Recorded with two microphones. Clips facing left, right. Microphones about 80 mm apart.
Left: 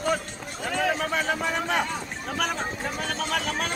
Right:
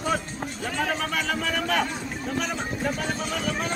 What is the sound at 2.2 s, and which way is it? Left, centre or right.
Speech, left.